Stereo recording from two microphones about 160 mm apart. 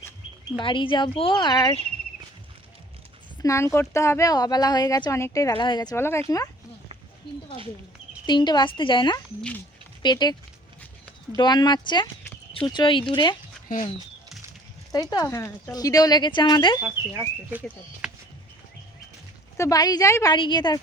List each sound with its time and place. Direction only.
0.6 s speech: 30° left (ahead or behind)
3.4 s speech: 20° left (ahead or behind)
8.3 s speech: 30° left (ahead or behind)
11.3 s speech: 25° left (ahead or behind)
15.1 s speech: 20° left (ahead or behind)
17.0 s speech: 15° right (ahead or behind)
18.0 s a sound: 5° right (ahead or behind)
19.5 s speech: 20° left (ahead or behind)